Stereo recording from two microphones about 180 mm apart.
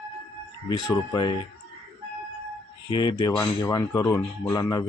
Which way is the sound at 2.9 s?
25° left (ahead or behind).